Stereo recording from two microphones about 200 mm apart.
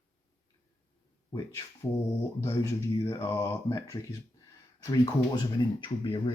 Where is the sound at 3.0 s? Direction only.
15° left (ahead or behind).